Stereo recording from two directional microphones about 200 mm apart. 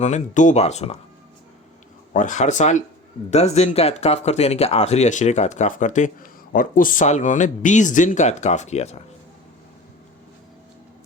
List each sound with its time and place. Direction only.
0.0 s speech: 35° left (ahead or behind)
2.1 s speech: 40° left (ahead or behind)